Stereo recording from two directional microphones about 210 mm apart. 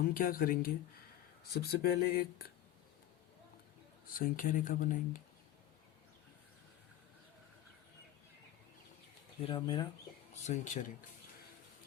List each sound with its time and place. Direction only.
0.1 s speech: 45° left (ahead or behind)
4.2 s speech: 40° left (ahead or behind)
9.4 s speech: 25° left (ahead or behind)
10.4 s speech: 35° left (ahead or behind)